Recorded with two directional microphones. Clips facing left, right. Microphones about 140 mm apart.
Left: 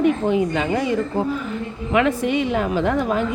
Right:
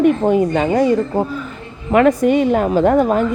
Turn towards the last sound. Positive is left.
turn(degrees=-45)  # may be behind; listen again after turning